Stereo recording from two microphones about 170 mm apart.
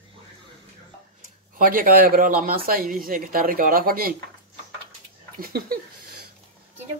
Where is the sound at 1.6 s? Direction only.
55° right (ahead or behind).